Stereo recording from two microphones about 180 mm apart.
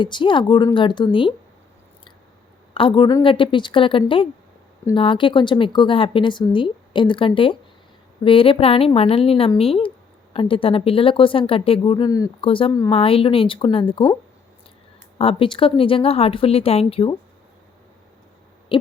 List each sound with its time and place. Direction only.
0.0 s speech: 25° left (ahead or behind)
2.7 s speech: 30° left (ahead or behind)
15.2 s speech: 30° left (ahead or behind)
18.7 s owl: 25° left (ahead or behind)